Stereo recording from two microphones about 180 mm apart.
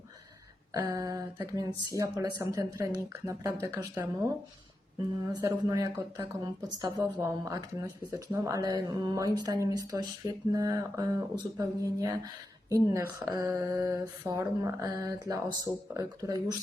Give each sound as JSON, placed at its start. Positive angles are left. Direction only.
{"t": 0.7, "sound": "speech", "side_deg": -20}
{"t": 5.3, "sound": "speech", "side_deg": -20}